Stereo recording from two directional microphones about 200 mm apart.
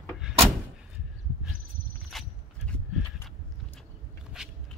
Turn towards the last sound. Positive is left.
turn(degrees=-5)  # may be behind; listen again after turning